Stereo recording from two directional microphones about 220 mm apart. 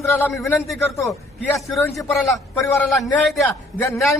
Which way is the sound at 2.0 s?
Centre (ahead or behind).